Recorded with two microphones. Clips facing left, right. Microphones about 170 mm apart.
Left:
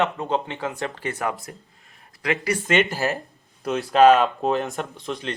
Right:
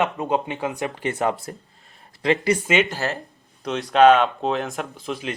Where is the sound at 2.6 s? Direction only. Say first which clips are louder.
Even; 5° right (ahead or behind).